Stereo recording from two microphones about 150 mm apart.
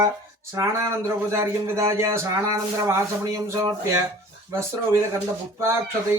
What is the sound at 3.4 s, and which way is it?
Speech, 15° right (ahead or behind).